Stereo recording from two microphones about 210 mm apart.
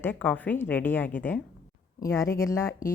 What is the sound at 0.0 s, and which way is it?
Speech, 10° left (ahead or behind).